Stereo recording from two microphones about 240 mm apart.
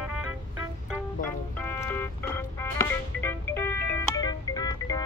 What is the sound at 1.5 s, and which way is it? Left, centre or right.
Music, centre.